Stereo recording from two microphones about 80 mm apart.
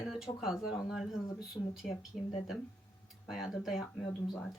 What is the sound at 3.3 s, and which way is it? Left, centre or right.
Speech, centre.